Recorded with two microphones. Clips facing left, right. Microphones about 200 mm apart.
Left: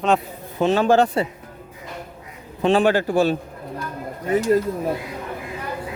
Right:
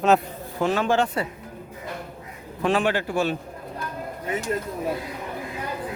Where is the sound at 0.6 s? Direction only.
30° left (ahead or behind).